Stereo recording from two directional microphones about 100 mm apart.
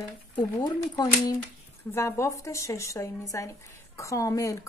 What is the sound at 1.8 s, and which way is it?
Speech, 30° left (ahead or behind).